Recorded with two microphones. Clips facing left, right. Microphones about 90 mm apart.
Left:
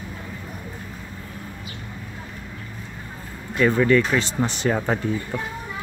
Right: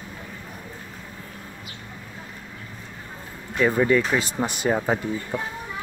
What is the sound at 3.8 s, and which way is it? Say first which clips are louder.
Speech: left 2 dB; 15° right (ahead or behind).